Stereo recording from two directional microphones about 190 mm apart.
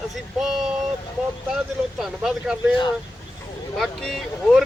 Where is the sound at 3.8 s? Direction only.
Centre (ahead or behind).